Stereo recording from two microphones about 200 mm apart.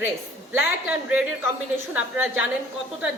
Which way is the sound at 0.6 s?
5° right (ahead or behind).